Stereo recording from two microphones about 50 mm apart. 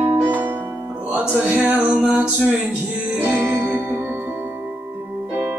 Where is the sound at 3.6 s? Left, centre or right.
Right.